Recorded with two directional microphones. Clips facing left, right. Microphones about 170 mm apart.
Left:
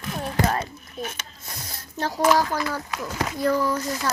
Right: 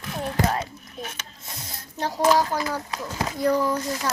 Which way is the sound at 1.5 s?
20° right (ahead or behind).